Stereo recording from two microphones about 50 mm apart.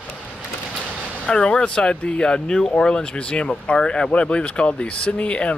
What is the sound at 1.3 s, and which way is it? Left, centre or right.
A man's voice, centre.